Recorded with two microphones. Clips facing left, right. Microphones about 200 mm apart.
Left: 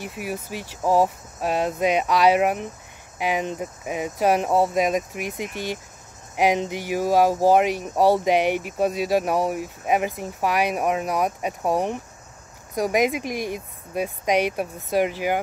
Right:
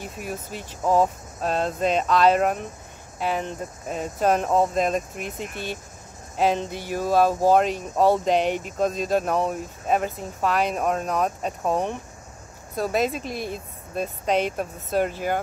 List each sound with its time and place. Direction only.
0.0 s speech: 10° left (ahead or behind)